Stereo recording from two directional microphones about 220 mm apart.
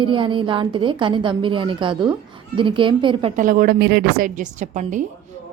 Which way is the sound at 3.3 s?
40° right (ahead or behind).